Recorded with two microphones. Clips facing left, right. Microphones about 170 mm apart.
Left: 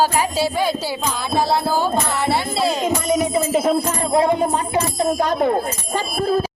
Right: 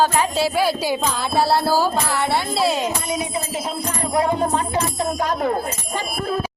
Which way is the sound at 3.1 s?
55° left (ahead or behind).